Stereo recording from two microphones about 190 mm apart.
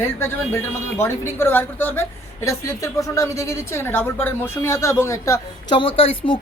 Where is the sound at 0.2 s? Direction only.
15° left (ahead or behind).